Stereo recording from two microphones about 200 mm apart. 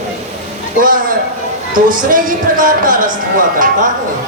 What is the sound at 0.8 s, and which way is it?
Speech, 45° right (ahead or behind).